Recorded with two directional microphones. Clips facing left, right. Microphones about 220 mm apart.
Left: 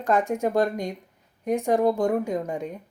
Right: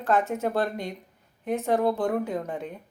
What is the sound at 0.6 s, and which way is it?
Speech, 45° left (ahead or behind).